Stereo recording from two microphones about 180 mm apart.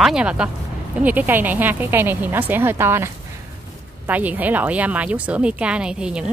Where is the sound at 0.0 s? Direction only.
5° right (ahead or behind).